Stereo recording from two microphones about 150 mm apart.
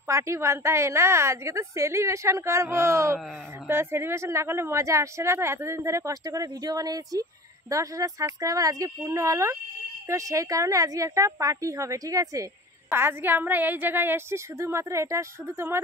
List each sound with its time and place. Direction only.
0.1 s a woman's voice: 20° right (ahead or behind)